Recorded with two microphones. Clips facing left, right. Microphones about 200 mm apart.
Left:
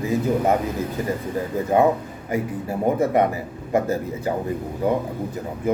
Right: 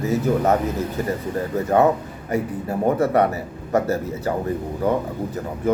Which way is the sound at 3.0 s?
15° left (ahead or behind).